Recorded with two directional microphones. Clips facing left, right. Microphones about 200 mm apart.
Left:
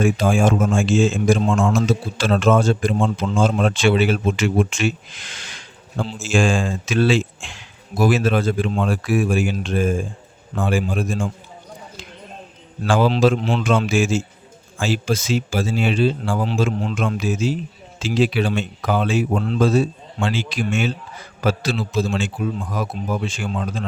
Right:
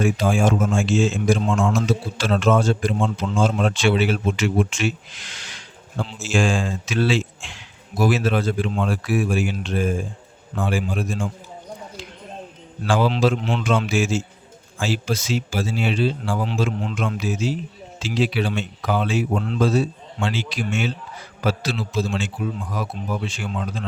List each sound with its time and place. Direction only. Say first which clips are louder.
0.0 s a man's voice: left 2 dB; 50° left (ahead or behind)
12.9 s a man's voice: left 3 dB; 50° left (ahead or behind)